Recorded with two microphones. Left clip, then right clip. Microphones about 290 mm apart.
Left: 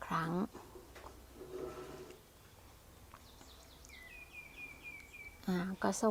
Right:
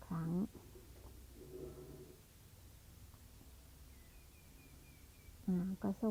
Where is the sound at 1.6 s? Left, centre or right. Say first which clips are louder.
Left 8 dB; centre.